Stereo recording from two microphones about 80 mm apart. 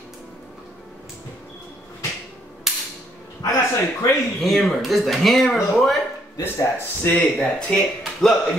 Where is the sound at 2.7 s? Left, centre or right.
Centre.